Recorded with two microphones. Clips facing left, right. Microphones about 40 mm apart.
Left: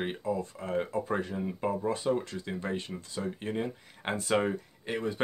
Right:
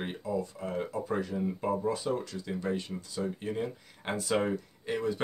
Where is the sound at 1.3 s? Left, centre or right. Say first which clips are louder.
Right 1 dB; left.